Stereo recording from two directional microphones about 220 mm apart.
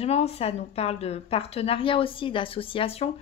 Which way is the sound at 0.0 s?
30° left (ahead or behind).